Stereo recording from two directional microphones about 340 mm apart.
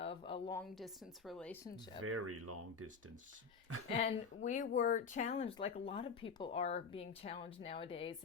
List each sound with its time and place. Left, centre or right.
0.0 s a sound: centre
1.3 s speech: centre
2.0 s speech: right
3.8 s speech: centre